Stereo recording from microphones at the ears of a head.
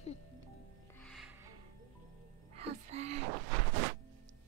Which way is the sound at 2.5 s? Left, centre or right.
Right.